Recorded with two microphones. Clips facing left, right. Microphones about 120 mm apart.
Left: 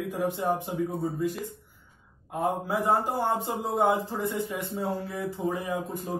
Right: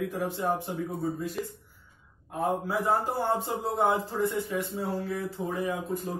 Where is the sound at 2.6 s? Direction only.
15° left (ahead or behind).